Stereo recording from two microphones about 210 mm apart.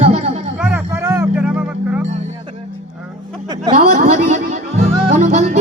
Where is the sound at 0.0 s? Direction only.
30° right (ahead or behind).